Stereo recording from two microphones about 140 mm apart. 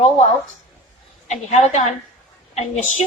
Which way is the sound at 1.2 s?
55° left (ahead or behind).